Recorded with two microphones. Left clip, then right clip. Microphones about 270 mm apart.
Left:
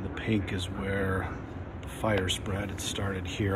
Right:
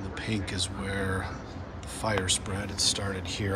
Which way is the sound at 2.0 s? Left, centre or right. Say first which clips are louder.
Even; centre.